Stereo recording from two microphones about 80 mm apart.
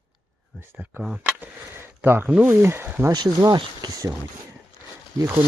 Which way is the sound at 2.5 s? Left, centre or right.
Right.